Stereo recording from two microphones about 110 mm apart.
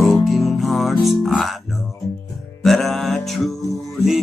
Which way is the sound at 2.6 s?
Centre (ahead or behind).